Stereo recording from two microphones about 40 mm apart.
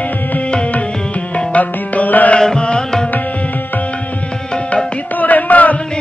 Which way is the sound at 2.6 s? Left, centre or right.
Left.